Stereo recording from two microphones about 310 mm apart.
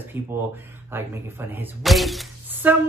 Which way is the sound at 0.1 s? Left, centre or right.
Centre.